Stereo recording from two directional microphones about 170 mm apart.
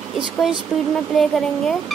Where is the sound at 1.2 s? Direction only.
Centre (ahead or behind).